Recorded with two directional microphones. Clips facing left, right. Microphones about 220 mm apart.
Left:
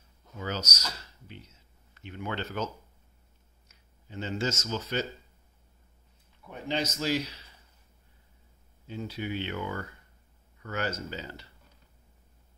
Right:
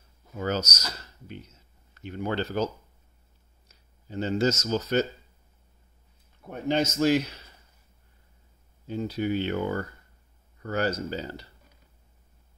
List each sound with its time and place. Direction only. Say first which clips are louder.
0.4 s speech: right 6 dB; 45° right (ahead or behind)
6.4 s speech: right 6 dB; 50° right (ahead or behind)
8.8 s speech: right 7 dB; 40° right (ahead or behind)